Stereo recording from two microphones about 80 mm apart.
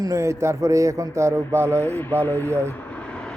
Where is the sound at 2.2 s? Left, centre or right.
Left.